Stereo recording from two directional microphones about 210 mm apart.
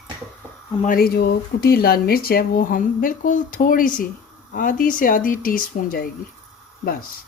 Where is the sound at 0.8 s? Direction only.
45° left (ahead or behind).